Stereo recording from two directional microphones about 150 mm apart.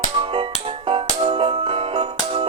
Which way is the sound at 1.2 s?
35° right (ahead or behind).